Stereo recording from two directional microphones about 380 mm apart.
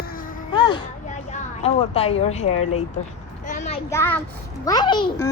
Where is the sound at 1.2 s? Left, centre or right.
Centre.